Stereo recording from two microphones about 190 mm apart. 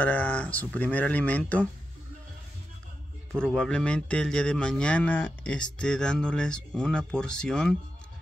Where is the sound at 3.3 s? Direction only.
Centre (ahead or behind).